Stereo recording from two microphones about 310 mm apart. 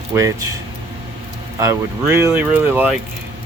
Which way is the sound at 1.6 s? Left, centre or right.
Centre.